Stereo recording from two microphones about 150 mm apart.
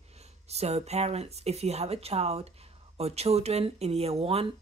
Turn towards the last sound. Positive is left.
turn(degrees=-40)  # may be behind; listen again after turning